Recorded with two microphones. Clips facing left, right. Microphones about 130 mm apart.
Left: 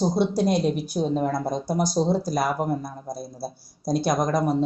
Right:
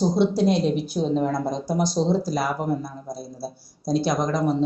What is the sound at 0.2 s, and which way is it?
Speech, 45° left (ahead or behind).